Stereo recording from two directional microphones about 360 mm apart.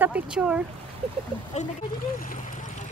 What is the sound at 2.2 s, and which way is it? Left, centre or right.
Speech, left.